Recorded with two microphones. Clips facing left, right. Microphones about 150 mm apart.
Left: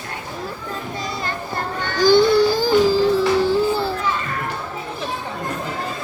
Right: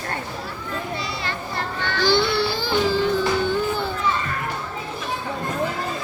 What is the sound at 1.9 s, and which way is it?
Music, 45° left (ahead or behind).